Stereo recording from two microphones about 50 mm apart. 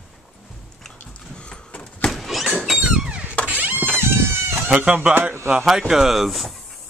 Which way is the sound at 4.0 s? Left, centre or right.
Right.